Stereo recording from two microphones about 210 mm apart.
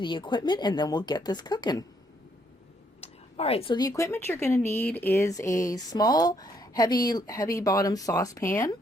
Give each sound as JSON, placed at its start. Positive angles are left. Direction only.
{"t": 0.0, "sound": "speech", "side_deg": 20}
{"t": 3.0, "sound": "speech", "side_deg": 30}